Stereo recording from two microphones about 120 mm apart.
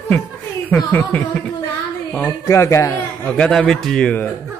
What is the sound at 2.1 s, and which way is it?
Speech, 20° left (ahead or behind).